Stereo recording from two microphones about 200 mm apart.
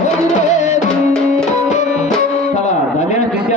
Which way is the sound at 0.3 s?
35° left (ahead or behind).